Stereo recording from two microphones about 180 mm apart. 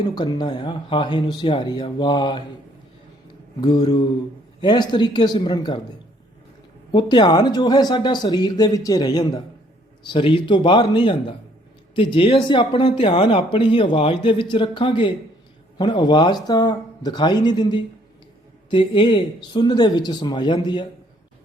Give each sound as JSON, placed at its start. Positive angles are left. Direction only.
{"t": 0.0, "sound": "speech", "side_deg": 25}
{"t": 3.6, "sound": "speech", "side_deg": 20}
{"t": 6.9, "sound": "speech", "side_deg": 25}